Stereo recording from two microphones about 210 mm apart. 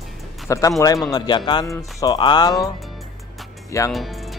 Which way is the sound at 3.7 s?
15° left (ahead or behind).